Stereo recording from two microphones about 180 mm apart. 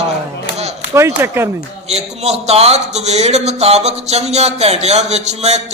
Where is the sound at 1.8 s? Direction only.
35° right (ahead or behind).